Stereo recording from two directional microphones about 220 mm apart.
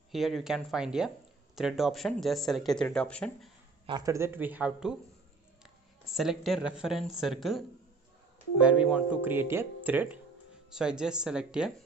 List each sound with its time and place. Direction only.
0.1 s speech: centre (ahead or behind)
3.8 s speech: 15° right (ahead or behind)